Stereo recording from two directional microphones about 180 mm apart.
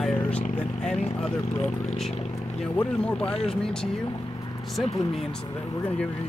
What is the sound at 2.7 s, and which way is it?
Speech, 5° left (ahead or behind).